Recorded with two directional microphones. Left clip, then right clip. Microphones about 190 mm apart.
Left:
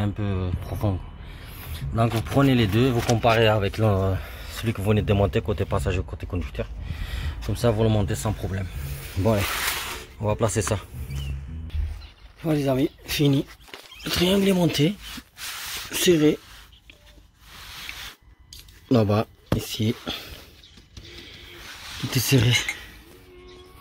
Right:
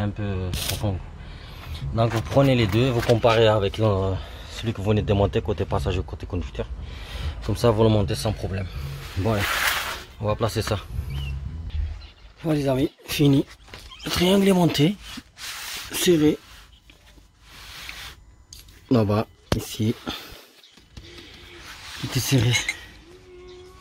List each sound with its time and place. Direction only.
0.0 s speech: 10° left (ahead or behind)
1.7 s speech: centre (ahead or behind)
7.2 s speech: 20° right (ahead or behind)
8.1 s speech: 5° right (ahead or behind)
12.4 s speech: 5° right (ahead or behind); by 15.0 s 35° right (ahead or behind)
15.9 s speech: 10° right (ahead or behind)
18.5 s a sound: 5° right (ahead or behind)
19.6 s speech: 20° right (ahead or behind)
20.1 s a sound: 25° right (ahead or behind)
22.1 s speech: 5° left (ahead or behind)